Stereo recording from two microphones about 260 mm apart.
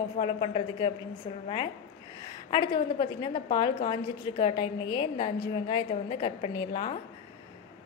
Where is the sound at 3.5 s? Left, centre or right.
Centre.